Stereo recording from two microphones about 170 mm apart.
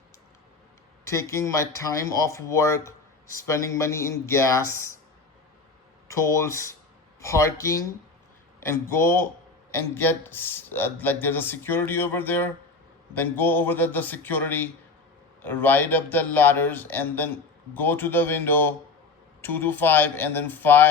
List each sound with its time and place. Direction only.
1.0 s speech: 15° left (ahead or behind)
6.1 s speech: 20° left (ahead or behind)